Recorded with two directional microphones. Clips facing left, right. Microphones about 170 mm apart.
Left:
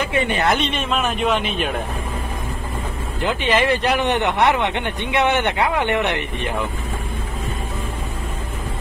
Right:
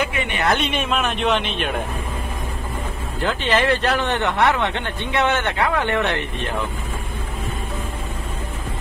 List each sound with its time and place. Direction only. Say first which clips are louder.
0.1 s speech: left 4 dB; 35° left (ahead or behind)
0.6 s a man's voice: even; 5° right (ahead or behind)
3.2 s speech: left 1 dB; 15° left (ahead or behind)